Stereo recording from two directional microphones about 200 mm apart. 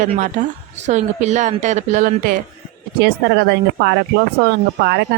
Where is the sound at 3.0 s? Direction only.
55° right (ahead or behind).